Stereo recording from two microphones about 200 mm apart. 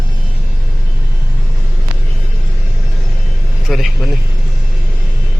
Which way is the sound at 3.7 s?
Centre (ahead or behind).